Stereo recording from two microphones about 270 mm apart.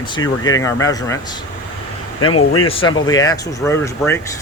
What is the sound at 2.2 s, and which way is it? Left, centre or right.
Speech, left.